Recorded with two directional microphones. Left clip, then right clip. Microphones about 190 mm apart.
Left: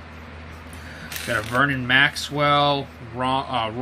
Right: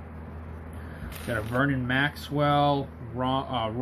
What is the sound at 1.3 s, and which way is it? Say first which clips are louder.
Speech: left 6 dB; 15° left (ahead or behind).